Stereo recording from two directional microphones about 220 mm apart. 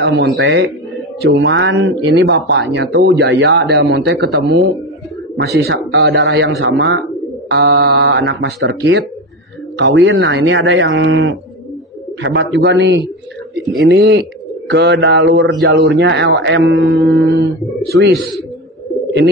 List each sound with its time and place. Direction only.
0.0 s speech: 50° right (ahead or behind)